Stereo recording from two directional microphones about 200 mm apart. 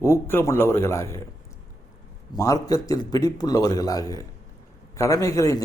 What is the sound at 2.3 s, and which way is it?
Speech, 20° left (ahead or behind).